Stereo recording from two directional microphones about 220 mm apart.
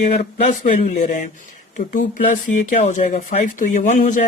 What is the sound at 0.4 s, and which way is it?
Speech, 35° left (ahead or behind).